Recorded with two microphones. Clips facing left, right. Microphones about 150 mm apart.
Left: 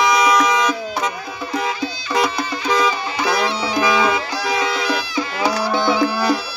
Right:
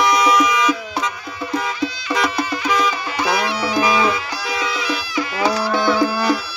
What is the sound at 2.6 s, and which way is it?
Music, 30° left (ahead or behind).